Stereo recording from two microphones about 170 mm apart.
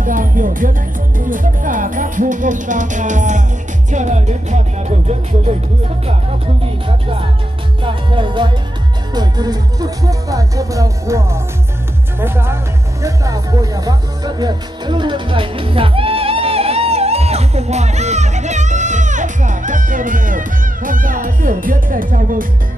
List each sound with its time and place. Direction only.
0.0 s speech: 50° right (ahead or behind)
6.6 s music: 35° right (ahead or behind)
7.8 s speech: 30° right (ahead or behind); by 22.5 s 55° right (ahead or behind)